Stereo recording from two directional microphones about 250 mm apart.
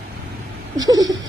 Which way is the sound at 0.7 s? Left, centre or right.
Centre.